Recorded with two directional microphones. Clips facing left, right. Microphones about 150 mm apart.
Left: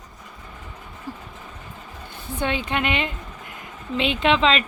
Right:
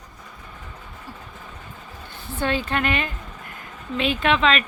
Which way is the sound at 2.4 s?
15° left (ahead or behind).